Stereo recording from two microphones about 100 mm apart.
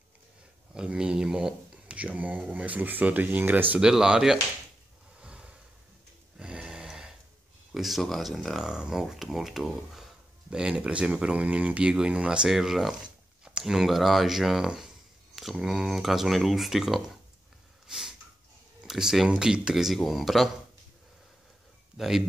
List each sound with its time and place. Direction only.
0.7 s speech: 10° right (ahead or behind)
3.7 s speech: 5° right (ahead or behind)
5.2 s a sound: 10° right (ahead or behind)
7.7 s speech: centre (ahead or behind)
17.8 s snort: 5° right (ahead or behind)
18.8 s speech: 5° right (ahead or behind)
21.9 s speech: 5° right (ahead or behind)